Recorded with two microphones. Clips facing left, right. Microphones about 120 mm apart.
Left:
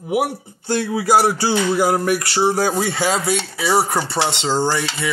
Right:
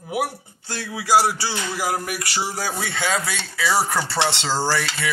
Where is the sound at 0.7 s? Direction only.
50° left (ahead or behind).